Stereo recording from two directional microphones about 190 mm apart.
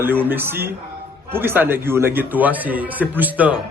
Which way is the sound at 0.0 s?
10° right (ahead or behind).